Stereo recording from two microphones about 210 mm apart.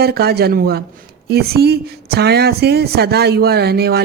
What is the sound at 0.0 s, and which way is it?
A woman's voice, 50° right (ahead or behind).